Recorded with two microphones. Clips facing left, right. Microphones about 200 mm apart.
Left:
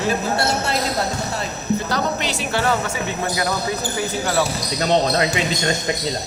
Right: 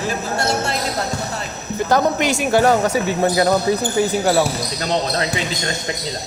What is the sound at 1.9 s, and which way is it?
Speech, 50° right (ahead or behind).